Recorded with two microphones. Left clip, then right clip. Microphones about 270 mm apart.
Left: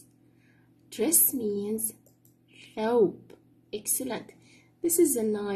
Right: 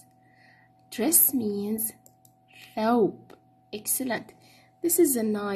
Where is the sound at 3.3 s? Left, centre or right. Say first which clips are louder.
Left 1 dB; right.